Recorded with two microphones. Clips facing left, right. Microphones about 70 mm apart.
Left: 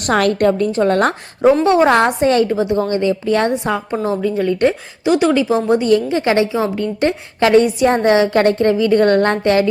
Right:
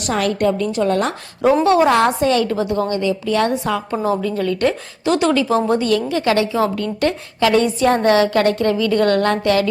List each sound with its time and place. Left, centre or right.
0.1 s a woman's voice: left
1.6 s a woman's voice: left
3.5 s a woman's voice: left